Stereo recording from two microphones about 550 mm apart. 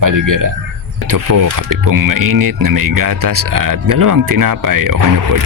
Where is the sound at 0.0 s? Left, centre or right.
Right.